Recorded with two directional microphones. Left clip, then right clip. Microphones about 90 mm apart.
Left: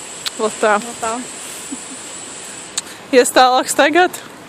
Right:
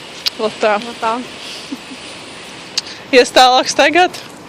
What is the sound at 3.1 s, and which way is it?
Speech, 50° left (ahead or behind).